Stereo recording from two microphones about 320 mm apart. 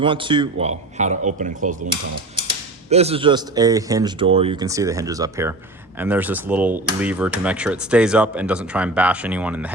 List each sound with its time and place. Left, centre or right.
0.0 s a man's voice: centre
2.9 s speech: centre